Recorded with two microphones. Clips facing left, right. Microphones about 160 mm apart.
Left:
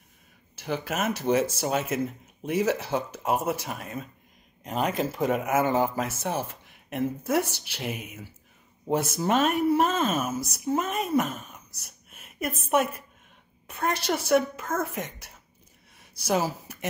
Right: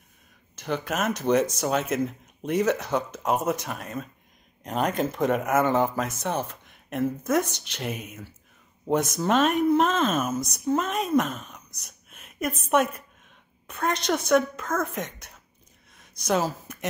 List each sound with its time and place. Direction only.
0.7 s speech: 10° left (ahead or behind)